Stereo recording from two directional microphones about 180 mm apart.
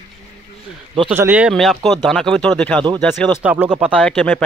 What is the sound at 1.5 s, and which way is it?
Speech, centre (ahead or behind).